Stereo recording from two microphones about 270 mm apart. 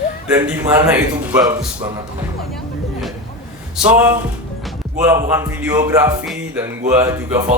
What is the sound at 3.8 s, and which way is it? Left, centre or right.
Speech, centre.